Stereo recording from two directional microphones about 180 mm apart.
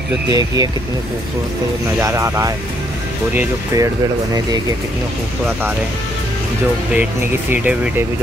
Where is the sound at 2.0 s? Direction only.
15° right (ahead or behind).